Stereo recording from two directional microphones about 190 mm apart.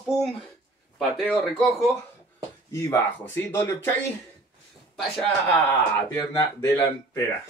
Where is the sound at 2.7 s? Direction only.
15° left (ahead or behind).